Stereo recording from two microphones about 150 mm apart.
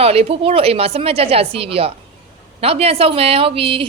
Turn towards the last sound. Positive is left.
turn(degrees=-35)  # may be behind; listen again after turning